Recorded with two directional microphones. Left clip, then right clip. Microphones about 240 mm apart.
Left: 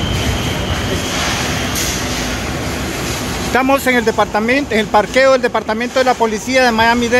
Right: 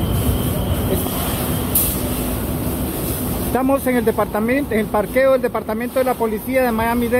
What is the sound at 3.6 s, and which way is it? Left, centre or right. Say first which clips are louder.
Speech: left 5 dB; centre.